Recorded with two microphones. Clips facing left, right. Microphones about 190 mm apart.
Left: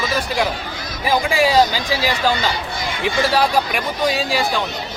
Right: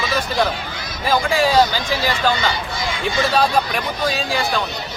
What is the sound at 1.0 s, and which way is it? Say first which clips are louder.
Speech: even; 15° left (ahead or behind).